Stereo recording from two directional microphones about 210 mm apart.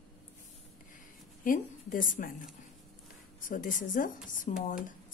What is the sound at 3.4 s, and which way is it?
A woman's voice, 40° left (ahead or behind).